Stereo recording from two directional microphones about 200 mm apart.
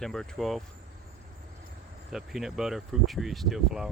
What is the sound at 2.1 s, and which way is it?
Speech, centre (ahead or behind).